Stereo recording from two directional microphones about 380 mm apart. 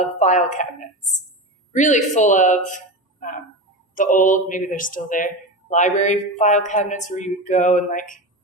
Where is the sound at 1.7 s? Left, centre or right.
Centre.